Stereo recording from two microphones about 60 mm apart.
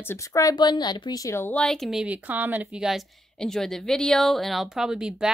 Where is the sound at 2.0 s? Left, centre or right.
Right.